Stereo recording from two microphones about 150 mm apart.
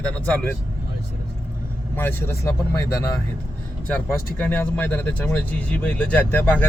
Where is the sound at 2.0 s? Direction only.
15° left (ahead or behind).